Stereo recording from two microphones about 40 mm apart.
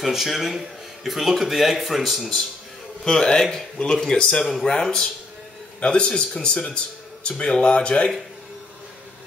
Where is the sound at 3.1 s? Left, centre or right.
Centre.